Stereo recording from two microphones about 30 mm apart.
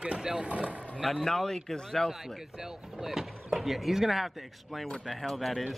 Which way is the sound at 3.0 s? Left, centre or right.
Centre.